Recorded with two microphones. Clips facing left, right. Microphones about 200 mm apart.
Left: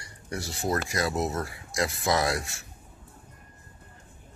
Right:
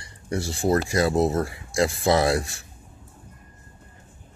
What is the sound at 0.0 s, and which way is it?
Speech, 30° right (ahead or behind).